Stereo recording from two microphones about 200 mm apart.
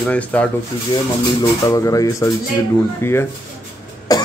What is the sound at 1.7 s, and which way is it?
A man's voice, 15° left (ahead or behind).